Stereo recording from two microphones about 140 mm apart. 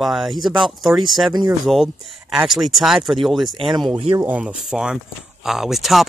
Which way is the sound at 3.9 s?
35° right (ahead or behind).